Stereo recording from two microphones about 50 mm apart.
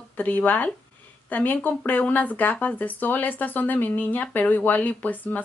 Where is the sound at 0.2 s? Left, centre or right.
Left.